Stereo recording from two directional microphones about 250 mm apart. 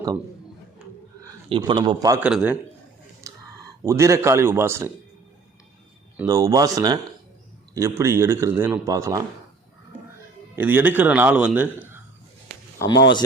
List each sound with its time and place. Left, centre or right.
0.8 s a sound: centre
1.2 s a man's voice: centre
2.2 s a man's voice: centre
3.3 s a sound: centre
3.8 s speech: centre
6.1 s speech: centre
10.5 s speech: centre
12.9 s speech: left